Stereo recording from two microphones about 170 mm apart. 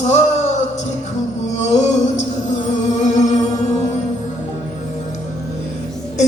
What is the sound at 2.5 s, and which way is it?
Music, 45° left (ahead or behind).